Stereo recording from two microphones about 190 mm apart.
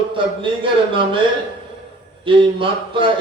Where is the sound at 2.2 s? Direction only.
25° right (ahead or behind).